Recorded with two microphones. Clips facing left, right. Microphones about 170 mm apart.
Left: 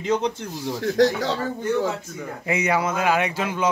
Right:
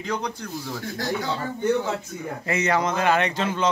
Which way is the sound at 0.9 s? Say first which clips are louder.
Left 8 dB; 90° left.